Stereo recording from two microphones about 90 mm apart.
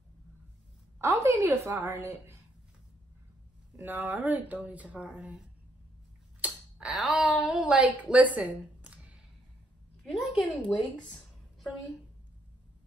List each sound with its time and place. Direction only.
1.0 s a woman's voice: 35° right (ahead or behind)
3.7 s speech: 20° right (ahead or behind)
6.4 s a sound: 10° right (ahead or behind)
7.0 s speech: centre (ahead or behind)
8.1 s a sound: 15° right (ahead or behind)
10.1 s speech: centre (ahead or behind)